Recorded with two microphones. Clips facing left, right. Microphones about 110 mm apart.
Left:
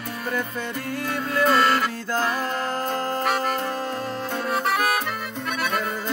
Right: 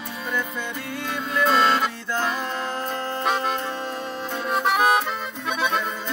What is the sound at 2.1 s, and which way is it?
Music, 40° left (ahead or behind).